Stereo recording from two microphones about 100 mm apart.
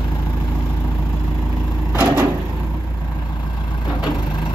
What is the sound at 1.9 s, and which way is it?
Vehicle, 15° right (ahead or behind).